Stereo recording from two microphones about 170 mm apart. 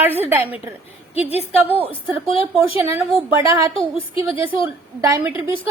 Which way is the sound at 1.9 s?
35° left (ahead or behind).